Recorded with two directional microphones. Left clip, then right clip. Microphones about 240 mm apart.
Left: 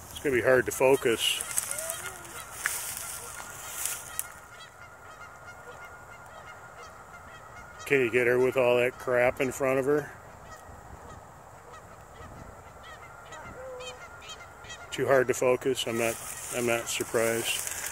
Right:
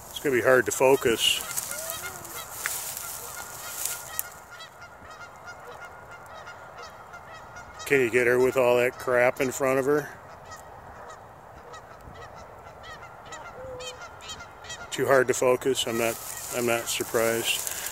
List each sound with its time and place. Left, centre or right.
0.2 s speech: centre
7.8 s goose: centre
8.5 s speech: centre
13.3 s goose: right
14.9 s speech: centre